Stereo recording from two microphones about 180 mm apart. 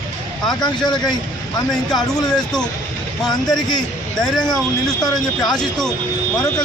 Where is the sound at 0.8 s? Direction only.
25° left (ahead or behind).